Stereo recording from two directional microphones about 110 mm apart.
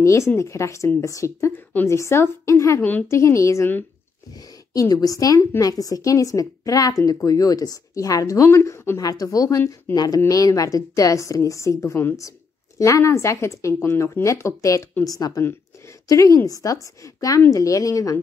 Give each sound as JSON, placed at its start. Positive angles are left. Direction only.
{"t": 0.4, "sound": "speech", "side_deg": 25}
{"t": 1.7, "sound": "a woman's voice", "side_deg": 15}
{"t": 2.8, "sound": "a woman's voice", "side_deg": 15}
{"t": 3.2, "sound": "a woman's voice", "side_deg": 25}